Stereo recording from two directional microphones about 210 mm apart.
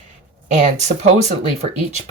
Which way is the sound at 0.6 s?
35° right (ahead or behind).